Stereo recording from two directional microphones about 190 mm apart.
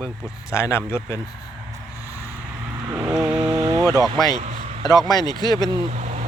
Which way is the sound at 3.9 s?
20° right (ahead or behind).